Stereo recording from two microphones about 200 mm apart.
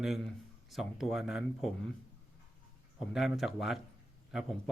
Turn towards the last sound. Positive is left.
turn(degrees=0)  # may be behind; listen again after turning